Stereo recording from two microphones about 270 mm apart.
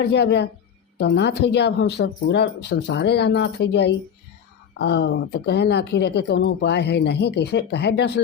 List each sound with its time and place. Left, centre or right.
0.0 s speech: left